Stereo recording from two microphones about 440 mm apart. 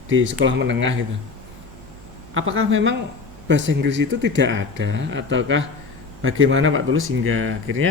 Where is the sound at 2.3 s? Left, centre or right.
Right.